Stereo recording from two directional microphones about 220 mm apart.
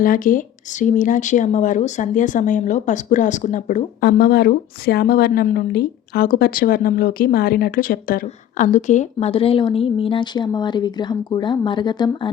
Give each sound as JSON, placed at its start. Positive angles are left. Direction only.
{"t": 0.0, "sound": "speech", "side_deg": 40}